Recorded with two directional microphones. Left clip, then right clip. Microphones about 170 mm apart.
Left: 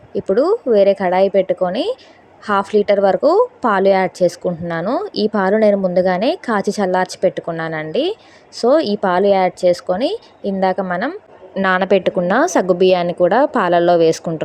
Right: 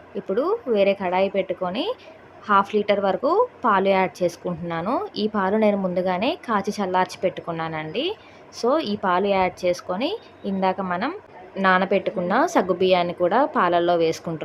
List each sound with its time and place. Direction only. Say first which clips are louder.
0.1 s a woman's voice: left 8 dB; 30° left (ahead or behind)
11.6 s a woman's voice: left 5 dB; 45° left (ahead or behind)